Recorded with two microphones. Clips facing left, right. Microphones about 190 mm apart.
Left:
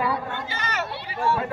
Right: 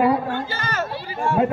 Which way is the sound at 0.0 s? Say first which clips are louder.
Right 8 dB; 50° right (ahead or behind).